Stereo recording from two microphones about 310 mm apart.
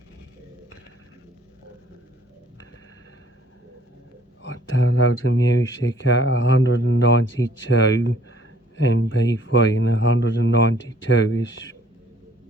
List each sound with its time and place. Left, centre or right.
4.4 s speech: left